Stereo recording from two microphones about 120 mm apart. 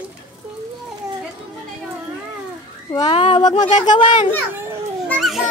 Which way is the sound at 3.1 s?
50° left (ahead or behind).